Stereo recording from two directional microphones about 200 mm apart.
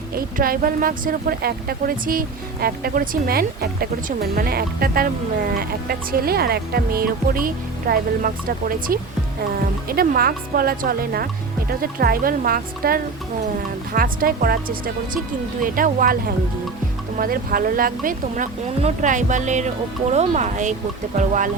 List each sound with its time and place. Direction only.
0.2 s speech: 45° right (ahead or behind)